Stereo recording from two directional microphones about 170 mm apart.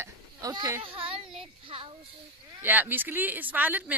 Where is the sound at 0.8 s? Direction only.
30° right (ahead or behind).